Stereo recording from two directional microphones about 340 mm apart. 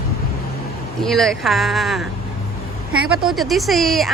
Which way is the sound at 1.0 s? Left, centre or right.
Centre.